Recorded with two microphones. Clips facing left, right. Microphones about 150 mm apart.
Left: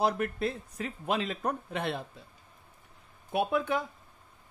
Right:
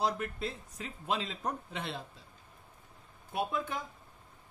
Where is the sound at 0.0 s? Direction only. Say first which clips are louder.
Left 5 dB; 60° left (ahead or behind).